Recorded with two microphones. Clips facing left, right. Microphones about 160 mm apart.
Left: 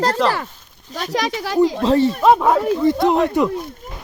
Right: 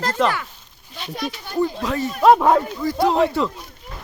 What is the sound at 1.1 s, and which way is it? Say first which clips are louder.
Speech: left 7 dB; 90° left.